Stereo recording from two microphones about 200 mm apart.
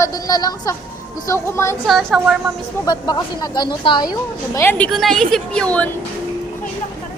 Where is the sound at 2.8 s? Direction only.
20° left (ahead or behind).